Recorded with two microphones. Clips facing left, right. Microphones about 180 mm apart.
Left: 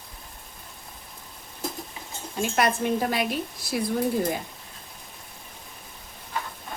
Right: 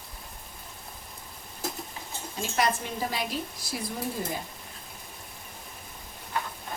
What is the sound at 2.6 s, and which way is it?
A woman's voice, 60° left (ahead or behind).